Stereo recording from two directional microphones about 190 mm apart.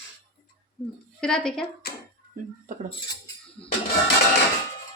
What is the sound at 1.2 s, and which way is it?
Speech, 5° left (ahead or behind).